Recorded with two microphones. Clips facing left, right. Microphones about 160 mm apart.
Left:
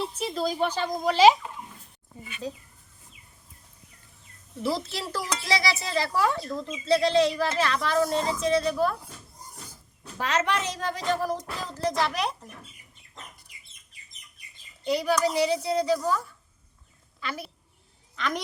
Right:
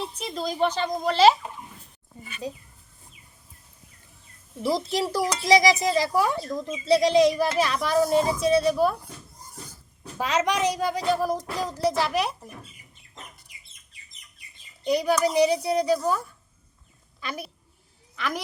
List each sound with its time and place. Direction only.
0.0 s speech: 5° left (ahead or behind)
4.6 s speech: 15° right (ahead or behind)
10.0 s speech: 10° right (ahead or behind)
14.8 s a woman's voice: 15° right (ahead or behind)